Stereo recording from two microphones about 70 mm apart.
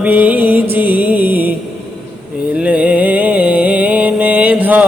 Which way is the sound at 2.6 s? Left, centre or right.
Centre.